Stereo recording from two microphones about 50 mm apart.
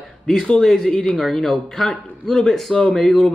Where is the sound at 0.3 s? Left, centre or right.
Centre.